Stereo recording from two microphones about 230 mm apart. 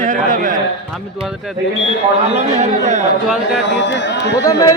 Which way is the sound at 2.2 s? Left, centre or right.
Right.